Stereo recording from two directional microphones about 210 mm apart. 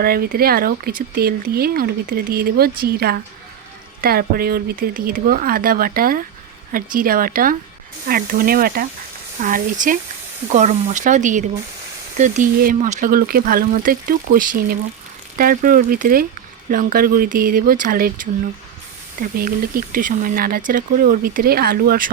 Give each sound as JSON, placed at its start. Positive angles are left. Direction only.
{"t": 0.0, "sound": "speech", "side_deg": -45}